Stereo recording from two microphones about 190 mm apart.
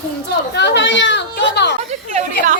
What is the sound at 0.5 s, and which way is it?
A woman's voice, 65° left (ahead or behind).